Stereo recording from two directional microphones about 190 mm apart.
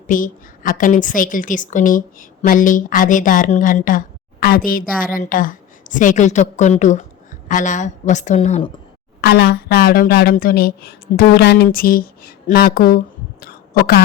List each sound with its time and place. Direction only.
0.1 s a woman's voice: 45° left (ahead or behind)
9.2 s a woman's voice: 60° left (ahead or behind)
13.4 s a sound: 50° left (ahead or behind)